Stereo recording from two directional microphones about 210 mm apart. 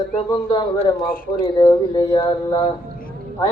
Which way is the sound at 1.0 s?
45° left (ahead or behind).